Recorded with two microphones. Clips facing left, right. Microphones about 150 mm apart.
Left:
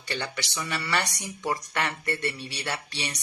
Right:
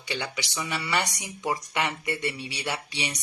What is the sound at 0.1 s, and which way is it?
Speech, 15° right (ahead or behind).